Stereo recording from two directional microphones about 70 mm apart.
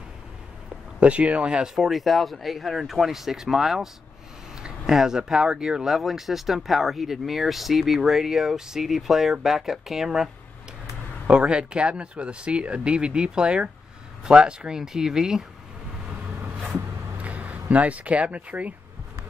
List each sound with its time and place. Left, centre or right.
0.9 s speech: centre
1.9 s speech: centre
17.2 s speech: centre